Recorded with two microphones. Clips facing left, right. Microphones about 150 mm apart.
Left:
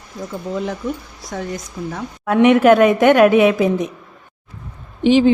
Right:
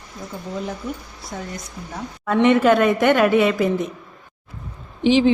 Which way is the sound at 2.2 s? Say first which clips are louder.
Left 4 dB; 15° left (ahead or behind).